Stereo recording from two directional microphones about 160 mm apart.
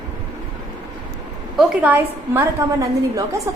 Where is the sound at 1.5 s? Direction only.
10° right (ahead or behind).